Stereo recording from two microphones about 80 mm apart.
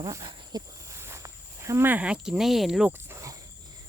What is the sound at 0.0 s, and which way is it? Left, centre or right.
Speech, right.